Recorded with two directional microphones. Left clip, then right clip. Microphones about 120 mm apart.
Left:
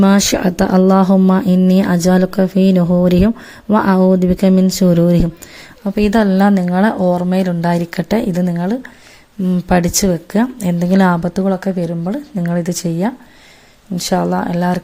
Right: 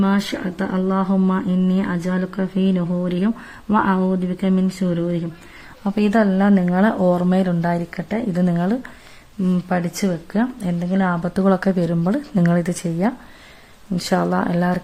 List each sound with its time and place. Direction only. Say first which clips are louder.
0.0 s speech: left 9 dB; 45° left (ahead or behind)
4.2 s speech: left 9 dB; 40° left (ahead or behind)
5.8 s speech: left 5 dB; 10° left (ahead or behind)
6.1 s a woman's voice: left 4 dB; 25° left (ahead or behind)
6.9 s a woman's voice: left 3 dB; 5° left (ahead or behind); by 8.3 s 30° left (ahead or behind)
8.3 s speech: left 3 dB; 15° left (ahead or behind)
9.6 s speech: left 11 dB; 35° left (ahead or behind)
11.4 s speech: right 3 dB; centre (ahead or behind)